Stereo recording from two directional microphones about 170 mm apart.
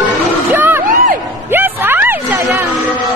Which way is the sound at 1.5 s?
10° right (ahead or behind).